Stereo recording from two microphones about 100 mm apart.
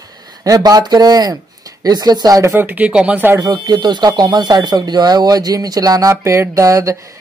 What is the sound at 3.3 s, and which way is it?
Speech, 40° right (ahead or behind).